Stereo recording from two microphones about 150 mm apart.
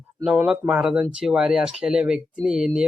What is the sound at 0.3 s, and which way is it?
A man's voice, 5° right (ahead or behind).